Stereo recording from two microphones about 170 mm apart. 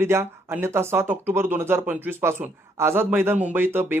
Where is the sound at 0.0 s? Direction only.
15° right (ahead or behind).